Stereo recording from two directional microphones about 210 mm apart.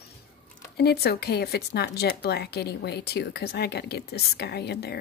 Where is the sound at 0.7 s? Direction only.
50° left (ahead or behind).